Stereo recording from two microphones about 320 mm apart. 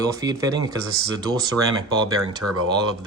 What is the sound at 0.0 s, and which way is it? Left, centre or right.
Speech, centre.